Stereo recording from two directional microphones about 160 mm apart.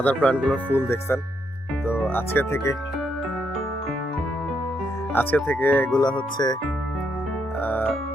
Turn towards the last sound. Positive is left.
turn(degrees=10)  # may be behind; listen again after turning